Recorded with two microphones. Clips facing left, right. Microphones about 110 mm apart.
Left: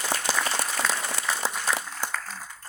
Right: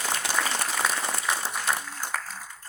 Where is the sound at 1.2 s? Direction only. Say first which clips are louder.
Even; 90° left.